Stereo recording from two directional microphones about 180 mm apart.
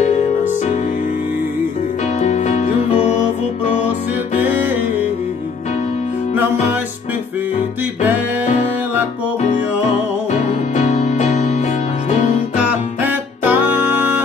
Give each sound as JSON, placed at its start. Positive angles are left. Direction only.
{"t": 2.1, "sound": "music", "side_deg": 40}
{"t": 10.3, "sound": "music", "side_deg": 40}
{"t": 12.5, "sound": "music", "side_deg": -10}